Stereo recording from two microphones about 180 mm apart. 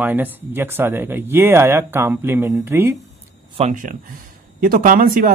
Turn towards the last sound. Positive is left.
turn(degrees=-50)  # may be behind; listen again after turning